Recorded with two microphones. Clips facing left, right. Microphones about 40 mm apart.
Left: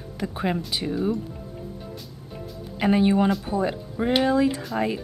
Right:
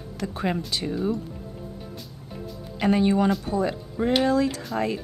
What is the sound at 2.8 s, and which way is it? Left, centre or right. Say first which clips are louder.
Speech: left 1 dB; centre.